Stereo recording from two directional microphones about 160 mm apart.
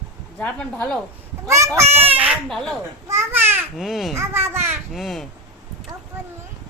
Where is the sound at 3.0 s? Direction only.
15° right (ahead or behind).